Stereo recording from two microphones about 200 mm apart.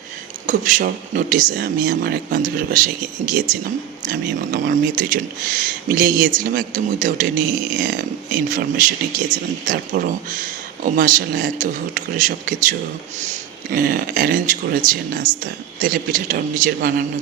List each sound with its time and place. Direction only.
0.4 s speech: 40° right (ahead or behind)